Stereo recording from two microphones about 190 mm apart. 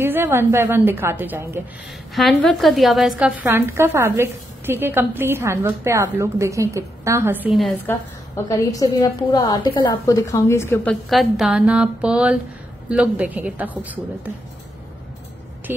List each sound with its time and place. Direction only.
0.0 s a woman's voice: 10° right (ahead or behind)
2.1 s a woman's voice: centre (ahead or behind)
7.5 s a woman's voice: centre (ahead or behind)
7.8 s a woman's voice: 15° left (ahead or behind); by 14.3 s 10° right (ahead or behind)